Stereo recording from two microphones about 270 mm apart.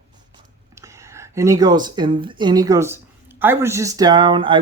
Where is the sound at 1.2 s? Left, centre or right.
Centre.